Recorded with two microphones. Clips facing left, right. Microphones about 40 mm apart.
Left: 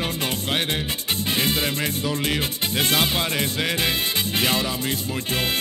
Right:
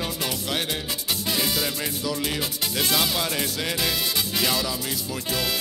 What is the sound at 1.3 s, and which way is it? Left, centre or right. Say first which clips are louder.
Music: left 3 dB; left.